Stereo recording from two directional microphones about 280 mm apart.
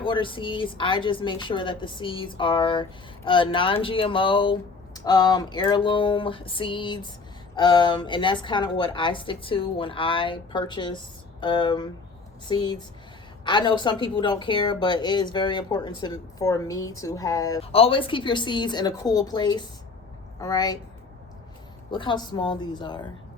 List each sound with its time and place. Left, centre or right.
0.0 s a woman's voice: centre
21.9 s a woman's voice: centre